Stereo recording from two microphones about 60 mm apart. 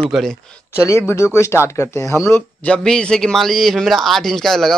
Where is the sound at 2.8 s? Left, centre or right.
Centre.